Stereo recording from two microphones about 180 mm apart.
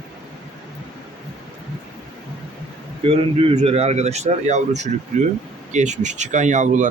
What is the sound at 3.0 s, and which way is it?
A man's voice, 35° right (ahead or behind).